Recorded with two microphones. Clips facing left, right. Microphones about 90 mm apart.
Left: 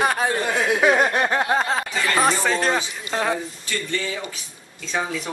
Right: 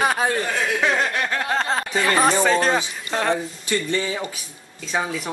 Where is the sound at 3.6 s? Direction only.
20° right (ahead or behind).